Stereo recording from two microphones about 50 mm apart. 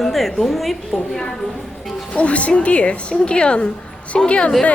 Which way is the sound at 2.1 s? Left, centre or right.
Left.